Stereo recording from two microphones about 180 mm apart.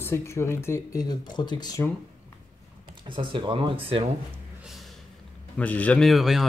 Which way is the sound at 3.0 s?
25° right (ahead or behind).